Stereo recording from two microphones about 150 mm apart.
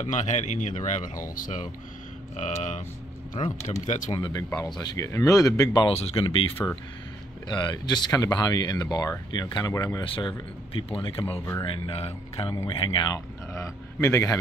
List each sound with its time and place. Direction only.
0.0 s speech: 55° left (ahead or behind)
3.4 s speech: 35° left (ahead or behind)
3.8 s speech: 55° left (ahead or behind)
4.1 s speech: 30° left (ahead or behind)
5.9 s speech: 40° left (ahead or behind); by 10.0 s 25° left (ahead or behind)
10.0 s speech: 35° left (ahead or behind)
11.3 s speech: 15° left (ahead or behind)
11.6 s speech: 35° left (ahead or behind)
13.5 s a man's voice: 20° left (ahead or behind)